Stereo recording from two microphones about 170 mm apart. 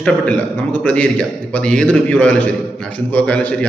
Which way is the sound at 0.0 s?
5° left (ahead or behind).